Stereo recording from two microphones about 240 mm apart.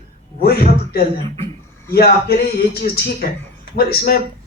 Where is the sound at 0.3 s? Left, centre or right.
Left.